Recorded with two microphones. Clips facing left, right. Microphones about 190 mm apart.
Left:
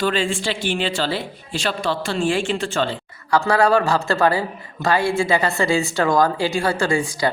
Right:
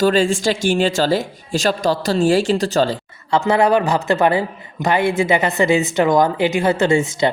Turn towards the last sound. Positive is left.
turn(degrees=-25)  # may be behind; listen again after turning